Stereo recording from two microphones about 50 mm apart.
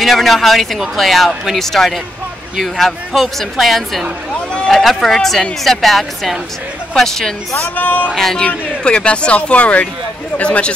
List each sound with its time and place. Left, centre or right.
0.0 s speech: centre
7.6 s speech: left
8.1 s speech: centre
8.5 s speech: left